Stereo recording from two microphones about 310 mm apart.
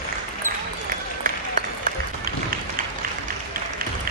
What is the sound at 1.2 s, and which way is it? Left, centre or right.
Run, right.